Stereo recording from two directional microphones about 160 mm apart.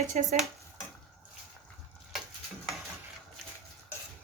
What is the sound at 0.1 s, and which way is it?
Speech, 50° right (ahead or behind).